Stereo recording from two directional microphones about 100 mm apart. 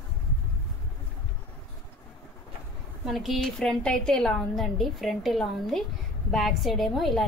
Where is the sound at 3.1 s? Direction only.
Centre (ahead or behind).